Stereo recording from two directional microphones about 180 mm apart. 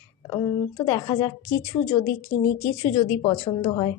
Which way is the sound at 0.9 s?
20° left (ahead or behind).